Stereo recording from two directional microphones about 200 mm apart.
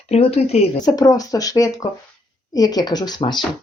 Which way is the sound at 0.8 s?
20° left (ahead or behind).